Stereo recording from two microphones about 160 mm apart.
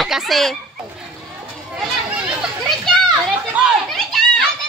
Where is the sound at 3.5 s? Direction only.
Centre (ahead or behind).